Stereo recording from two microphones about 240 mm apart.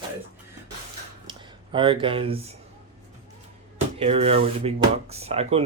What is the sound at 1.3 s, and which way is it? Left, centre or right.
Speech, right.